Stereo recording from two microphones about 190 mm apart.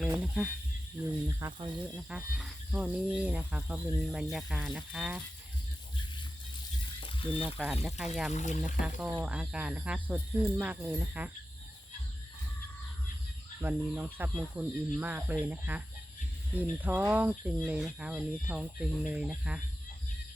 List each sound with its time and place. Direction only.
0.1 s speech: 5° right (ahead or behind)
1.4 s speech: 25° right (ahead or behind)
2.0 s speech: 5° right (ahead or behind)
7.0 s a sound: 25° left (ahead or behind)
7.9 s speech: centre (ahead or behind)
8.3 s speech: 40° left (ahead or behind)
9.0 s speech: 10° right (ahead or behind)
13.6 s speech: 10° right (ahead or behind)